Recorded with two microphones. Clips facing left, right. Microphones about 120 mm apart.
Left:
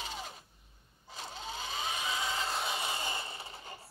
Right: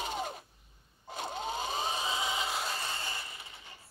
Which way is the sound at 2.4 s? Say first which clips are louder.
Right 1 dB; 5° right (ahead or behind).